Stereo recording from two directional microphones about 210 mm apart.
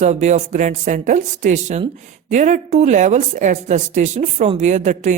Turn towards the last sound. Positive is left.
turn(degrees=-35)  # may be behind; listen again after turning